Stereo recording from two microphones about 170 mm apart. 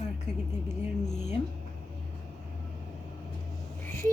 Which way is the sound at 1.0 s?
40° left (ahead or behind).